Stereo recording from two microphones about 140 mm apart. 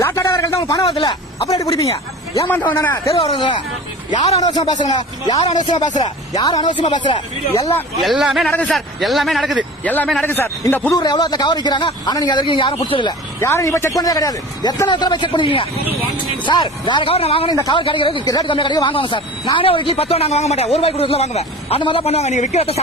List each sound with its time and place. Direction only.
0.0 s a sound: 20° left (ahead or behind)
0.6 s a man's voice: 25° left (ahead or behind)
0.9 s speech: 35° left (ahead or behind)
1.4 s a man's voice: 25° left (ahead or behind)
2.5 s a man's voice: 15° left (ahead or behind)
3.2 s a man's voice: 35° left (ahead or behind)
5.4 s speech: 55° left (ahead or behind)
6.0 s a man's voice: 30° left (ahead or behind)
8.0 s a man's voice: centre (ahead or behind)
9.8 s a man's voice: 10° left (ahead or behind)
10.9 s speech: 30° left (ahead or behind)
13.4 s a man's voice: 20° left (ahead or behind); by 17.5 s 45° left (ahead or behind)
17.5 s speech: 30° left (ahead or behind); by 22.8 s 50° left (ahead or behind)